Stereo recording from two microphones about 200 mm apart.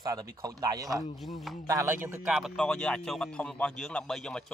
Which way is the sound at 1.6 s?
15° right (ahead or behind).